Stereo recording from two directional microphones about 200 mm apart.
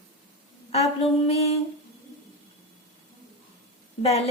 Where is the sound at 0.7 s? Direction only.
30° left (ahead or behind).